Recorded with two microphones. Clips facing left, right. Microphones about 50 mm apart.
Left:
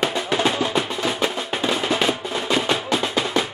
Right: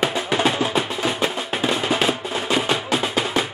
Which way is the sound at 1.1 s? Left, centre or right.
Centre.